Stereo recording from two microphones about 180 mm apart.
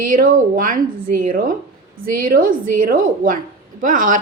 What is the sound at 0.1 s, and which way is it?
A woman's voice, 50° right (ahead or behind).